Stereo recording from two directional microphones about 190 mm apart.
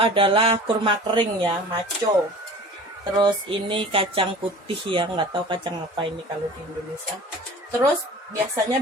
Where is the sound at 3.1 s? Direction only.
25° right (ahead or behind).